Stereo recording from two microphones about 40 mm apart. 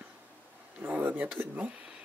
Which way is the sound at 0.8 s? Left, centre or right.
Right.